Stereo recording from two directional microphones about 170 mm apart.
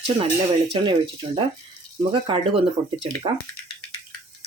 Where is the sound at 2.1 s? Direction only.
30° right (ahead or behind).